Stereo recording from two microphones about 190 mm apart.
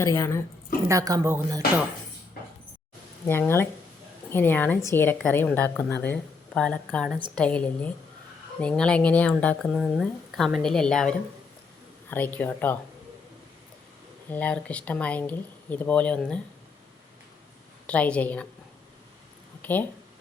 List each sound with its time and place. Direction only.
0.0 s speech: 15° left (ahead or behind)
0.9 s speech: 20° right (ahead or behind)
3.2 s speech: 10° left (ahead or behind)
12.1 s speech: 10° left (ahead or behind)
14.3 s speech: 10° left (ahead or behind)
17.8 s speech: 5° left (ahead or behind)
19.6 s speech: 10° left (ahead or behind)